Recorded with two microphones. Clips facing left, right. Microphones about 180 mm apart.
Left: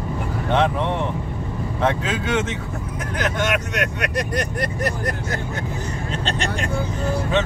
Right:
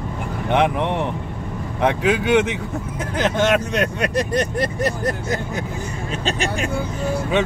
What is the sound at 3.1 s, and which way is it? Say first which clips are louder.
Speech: right 5 dB; 30° right (ahead or behind).